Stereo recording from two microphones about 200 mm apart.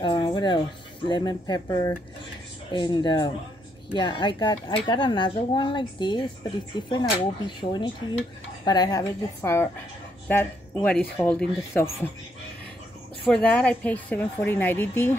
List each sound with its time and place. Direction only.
0.0 s speech: 20° left (ahead or behind)
13.3 s speech: 5° left (ahead or behind)